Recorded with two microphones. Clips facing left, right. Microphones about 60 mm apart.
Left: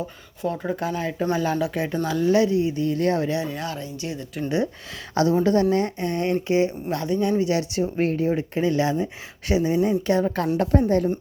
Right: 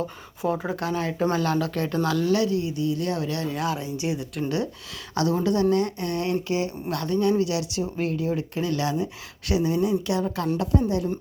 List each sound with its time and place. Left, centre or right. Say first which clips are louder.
0.4 s speech: even; centre
0.8 s speech: even; centre; by 3.3 s left
3.4 s speech: right 2 dB; centre
3.8 s speech: right 3 dB; centre
4.4 s a woman's voice: left 5 dB; left